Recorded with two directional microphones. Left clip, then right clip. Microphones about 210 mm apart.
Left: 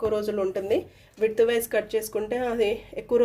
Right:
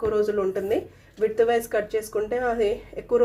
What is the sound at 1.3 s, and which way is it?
Speech, 40° left (ahead or behind).